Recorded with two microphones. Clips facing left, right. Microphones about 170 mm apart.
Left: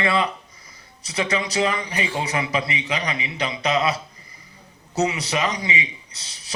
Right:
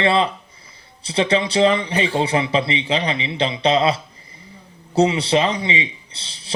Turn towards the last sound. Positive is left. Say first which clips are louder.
# right 3 dB
turn(degrees=-30)  # may be behind; listen again after turning